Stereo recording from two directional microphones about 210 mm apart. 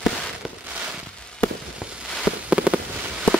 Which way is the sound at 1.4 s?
Centre (ahead or behind).